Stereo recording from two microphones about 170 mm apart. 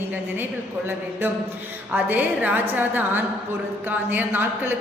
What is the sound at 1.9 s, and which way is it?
A man's voice, 10° right (ahead or behind).